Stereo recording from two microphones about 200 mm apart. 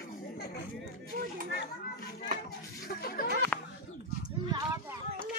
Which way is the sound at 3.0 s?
50° left (ahead or behind).